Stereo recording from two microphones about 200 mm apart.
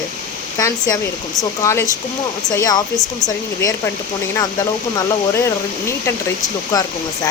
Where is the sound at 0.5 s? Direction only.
15° left (ahead or behind).